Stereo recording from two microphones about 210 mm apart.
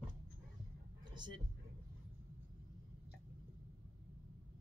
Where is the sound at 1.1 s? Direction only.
20° right (ahead or behind).